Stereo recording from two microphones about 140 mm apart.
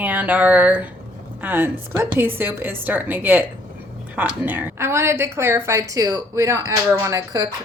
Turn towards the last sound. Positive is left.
turn(degrees=-25)  # may be behind; listen again after turning